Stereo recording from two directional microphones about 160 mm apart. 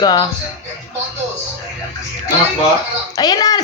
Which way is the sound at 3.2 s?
25° left (ahead or behind).